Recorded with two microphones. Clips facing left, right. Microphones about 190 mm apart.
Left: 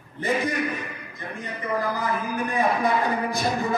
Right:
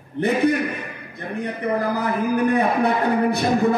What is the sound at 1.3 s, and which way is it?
A man's voice, 65° right (ahead or behind).